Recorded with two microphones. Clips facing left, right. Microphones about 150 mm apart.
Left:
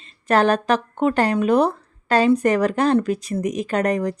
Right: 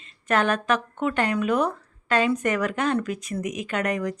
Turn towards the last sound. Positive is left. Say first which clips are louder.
# left 5 dB
turn(degrees=35)  # may be behind; listen again after turning